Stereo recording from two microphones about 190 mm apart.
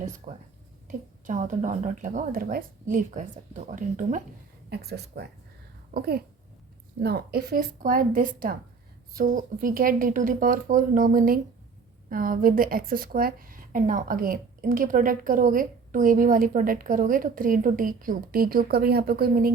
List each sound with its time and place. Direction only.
0.0 s a woman's voice: 40° right (ahead or behind)
4.7 s a woman's voice: 60° right (ahead or behind)